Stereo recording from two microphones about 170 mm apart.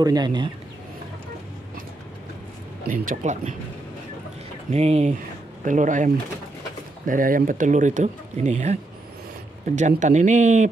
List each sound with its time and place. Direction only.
0.0 s speech: 25° right (ahead or behind)
2.9 s speech: 50° right (ahead or behind)
4.6 s speech: 40° right (ahead or behind)
9.8 s speech: 45° right (ahead or behind)